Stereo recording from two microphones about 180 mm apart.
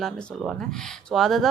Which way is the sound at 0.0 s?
Centre (ahead or behind).